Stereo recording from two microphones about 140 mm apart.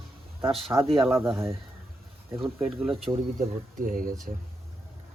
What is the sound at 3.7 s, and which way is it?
Speech, 75° right (ahead or behind).